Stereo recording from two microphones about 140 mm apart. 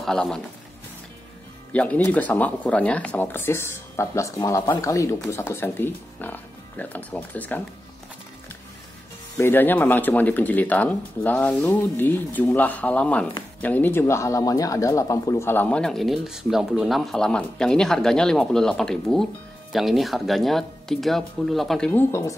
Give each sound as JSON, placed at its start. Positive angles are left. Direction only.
{"t": 0.0, "sound": "speech", "side_deg": 5}
{"t": 1.7, "sound": "speech", "side_deg": 10}
{"t": 9.4, "sound": "speech", "side_deg": 15}
{"t": 21.9, "sound": "speech", "side_deg": 20}